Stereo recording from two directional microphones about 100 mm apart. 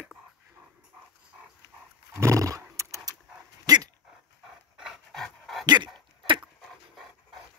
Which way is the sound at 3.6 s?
40° right (ahead or behind).